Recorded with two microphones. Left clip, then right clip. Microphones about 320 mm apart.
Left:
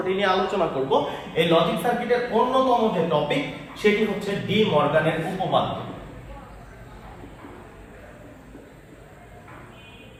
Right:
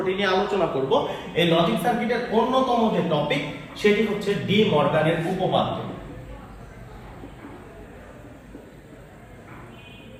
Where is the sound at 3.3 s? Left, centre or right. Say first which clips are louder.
Even; centre.